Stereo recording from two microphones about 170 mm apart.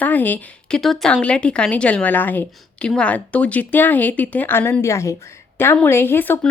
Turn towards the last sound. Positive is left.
turn(degrees=10)  # may be behind; listen again after turning